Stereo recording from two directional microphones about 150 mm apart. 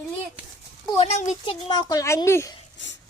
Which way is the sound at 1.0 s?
50° left (ahead or behind).